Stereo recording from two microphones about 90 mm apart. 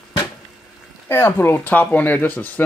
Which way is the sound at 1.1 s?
30° left (ahead or behind).